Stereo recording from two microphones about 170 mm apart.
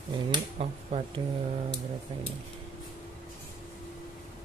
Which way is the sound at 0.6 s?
35° right (ahead or behind).